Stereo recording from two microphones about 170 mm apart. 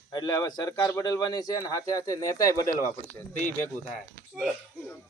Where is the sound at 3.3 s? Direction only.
45° left (ahead or behind).